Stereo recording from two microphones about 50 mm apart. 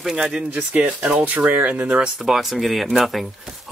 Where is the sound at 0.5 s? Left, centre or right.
Right.